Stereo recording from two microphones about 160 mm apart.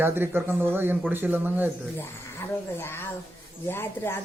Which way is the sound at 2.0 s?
15° left (ahead or behind).